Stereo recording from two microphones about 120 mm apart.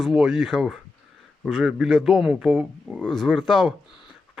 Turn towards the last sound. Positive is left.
turn(degrees=0)  # may be behind; listen again after turning